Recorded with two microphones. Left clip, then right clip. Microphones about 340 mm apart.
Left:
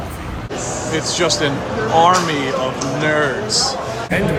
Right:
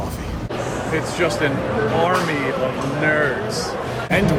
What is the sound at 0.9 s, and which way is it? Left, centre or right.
Speech, centre.